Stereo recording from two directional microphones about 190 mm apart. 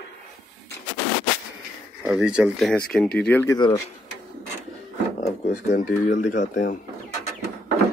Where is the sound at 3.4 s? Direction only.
20° left (ahead or behind).